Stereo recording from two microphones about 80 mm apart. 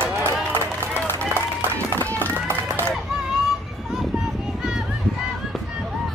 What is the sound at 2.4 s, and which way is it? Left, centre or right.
Run, right.